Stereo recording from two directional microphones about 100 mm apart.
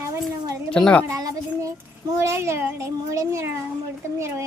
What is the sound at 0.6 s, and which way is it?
Speech, 10° left (ahead or behind).